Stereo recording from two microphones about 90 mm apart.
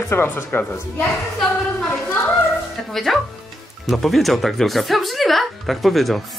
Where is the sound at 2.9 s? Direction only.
5° left (ahead or behind).